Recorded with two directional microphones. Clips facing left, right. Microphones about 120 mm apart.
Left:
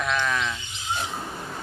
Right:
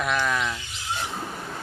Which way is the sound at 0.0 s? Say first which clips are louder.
Right 1 dB; 5° right (ahead or behind).